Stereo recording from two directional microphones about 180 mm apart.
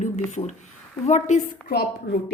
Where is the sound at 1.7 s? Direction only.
65° left (ahead or behind).